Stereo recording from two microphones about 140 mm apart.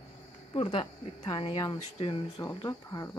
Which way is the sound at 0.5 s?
40° left (ahead or behind).